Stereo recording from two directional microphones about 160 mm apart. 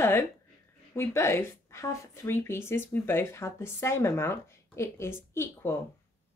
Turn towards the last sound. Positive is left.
turn(degrees=15)  # may be behind; listen again after turning